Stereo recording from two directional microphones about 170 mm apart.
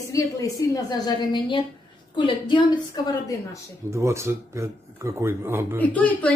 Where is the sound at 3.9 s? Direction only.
15° right (ahead or behind).